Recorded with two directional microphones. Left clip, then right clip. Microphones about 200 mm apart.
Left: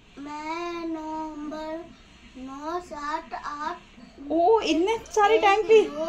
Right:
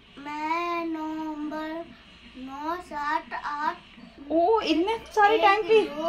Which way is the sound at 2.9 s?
20° right (ahead or behind).